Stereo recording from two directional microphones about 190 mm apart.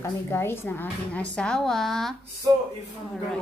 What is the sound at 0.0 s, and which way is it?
A woman's voice, 10° left (ahead or behind).